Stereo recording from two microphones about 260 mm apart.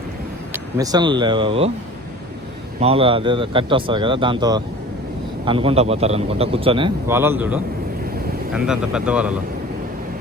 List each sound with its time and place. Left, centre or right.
0.5 s speech: centre
2.8 s a man's voice: right; by 9.4 s centre